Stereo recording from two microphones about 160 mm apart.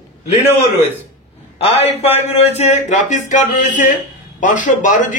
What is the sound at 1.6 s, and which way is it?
A man's voice, 40° left (ahead or behind).